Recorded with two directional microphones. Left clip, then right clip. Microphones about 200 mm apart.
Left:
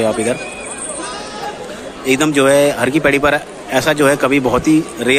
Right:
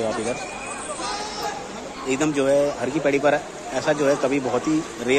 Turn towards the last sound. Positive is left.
turn(degrees=15)  # may be behind; listen again after turning